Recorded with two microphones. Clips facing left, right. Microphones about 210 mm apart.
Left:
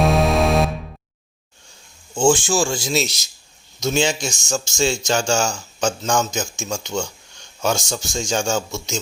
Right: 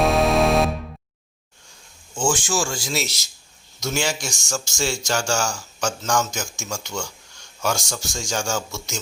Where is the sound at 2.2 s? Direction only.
30° left (ahead or behind).